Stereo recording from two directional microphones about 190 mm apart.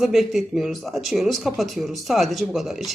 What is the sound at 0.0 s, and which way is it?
Speech, centre (ahead or behind).